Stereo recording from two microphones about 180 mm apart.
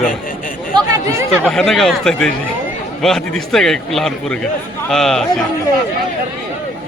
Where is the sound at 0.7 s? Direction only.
25° right (ahead or behind).